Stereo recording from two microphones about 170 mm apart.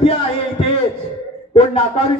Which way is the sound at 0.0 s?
35° left (ahead or behind).